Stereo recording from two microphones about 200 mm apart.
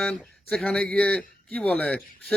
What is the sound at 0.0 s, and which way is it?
A man's voice, 5° left (ahead or behind).